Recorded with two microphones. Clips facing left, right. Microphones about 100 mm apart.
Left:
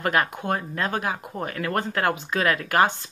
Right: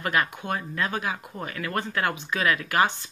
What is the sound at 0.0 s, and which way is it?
Speech, 45° left (ahead or behind).